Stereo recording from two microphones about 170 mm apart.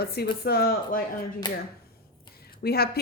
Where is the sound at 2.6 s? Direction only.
65° left (ahead or behind).